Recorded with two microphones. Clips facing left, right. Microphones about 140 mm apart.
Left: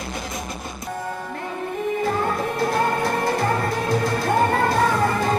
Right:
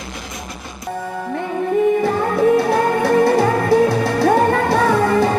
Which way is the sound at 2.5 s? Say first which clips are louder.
Right 6 dB; 70° right (ahead or behind).